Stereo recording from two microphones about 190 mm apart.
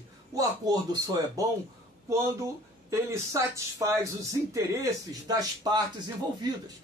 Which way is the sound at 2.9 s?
15° right (ahead or behind).